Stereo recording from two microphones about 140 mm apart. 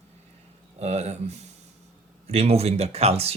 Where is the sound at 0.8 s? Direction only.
50° right (ahead or behind).